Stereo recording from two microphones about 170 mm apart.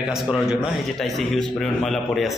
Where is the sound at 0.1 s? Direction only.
5° right (ahead or behind).